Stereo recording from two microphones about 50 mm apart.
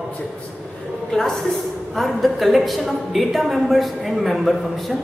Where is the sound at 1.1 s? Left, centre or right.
Centre.